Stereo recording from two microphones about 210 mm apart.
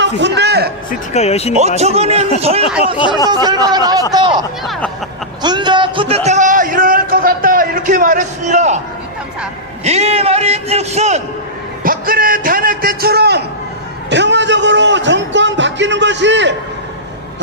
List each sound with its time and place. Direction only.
0.0 s a man's voice: 55° right (ahead or behind)
0.9 s speech: 30° left (ahead or behind)
1.5 s a man's voice: 30° right (ahead or behind)
3.2 s a man's voice: 20° right (ahead or behind)
4.6 s speech: centre (ahead or behind)
5.4 s a sound: 20° right (ahead or behind)
9.8 s a man's voice: 30° right (ahead or behind)
11.8 s a man's voice: 40° right (ahead or behind)